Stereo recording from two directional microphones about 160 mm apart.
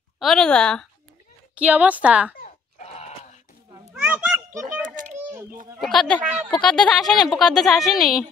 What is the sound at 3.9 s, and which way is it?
Children playing, 10° right (ahead or behind).